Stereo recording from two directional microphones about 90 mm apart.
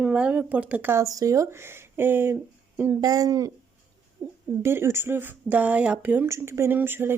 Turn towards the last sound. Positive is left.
turn(degrees=-25)  # may be behind; listen again after turning